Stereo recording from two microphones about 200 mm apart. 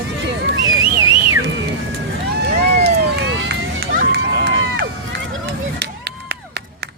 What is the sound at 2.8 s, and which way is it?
Run, 55° right (ahead or behind).